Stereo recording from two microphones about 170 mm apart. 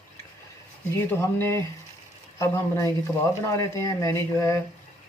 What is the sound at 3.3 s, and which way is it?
Speech, 15° left (ahead or behind).